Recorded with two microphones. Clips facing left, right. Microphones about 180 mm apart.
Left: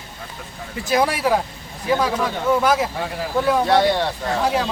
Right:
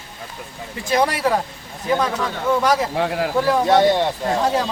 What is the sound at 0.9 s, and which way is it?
A man's voice, 5° left (ahead or behind).